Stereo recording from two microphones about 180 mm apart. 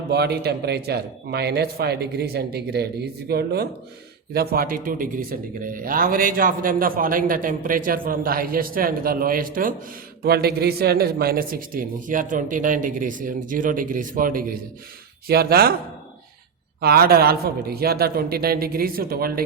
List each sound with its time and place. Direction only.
0.1 s a man's voice: 65° right (ahead or behind)
16.8 s a man's voice: 60° right (ahead or behind)